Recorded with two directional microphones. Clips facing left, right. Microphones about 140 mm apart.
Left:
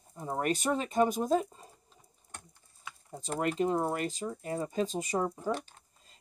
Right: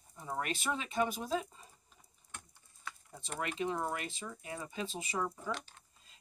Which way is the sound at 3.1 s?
40° left (ahead or behind).